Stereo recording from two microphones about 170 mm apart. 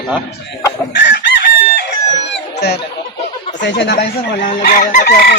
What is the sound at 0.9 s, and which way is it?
Chicken, 85° left.